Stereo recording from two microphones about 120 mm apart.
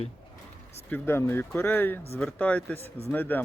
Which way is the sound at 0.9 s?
15° left (ahead or behind).